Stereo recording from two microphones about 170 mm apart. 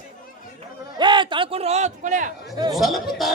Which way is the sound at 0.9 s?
25° right (ahead or behind).